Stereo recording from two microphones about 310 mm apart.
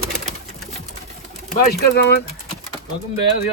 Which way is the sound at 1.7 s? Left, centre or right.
Left.